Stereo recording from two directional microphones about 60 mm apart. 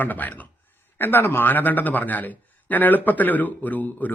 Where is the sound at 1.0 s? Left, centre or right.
Left.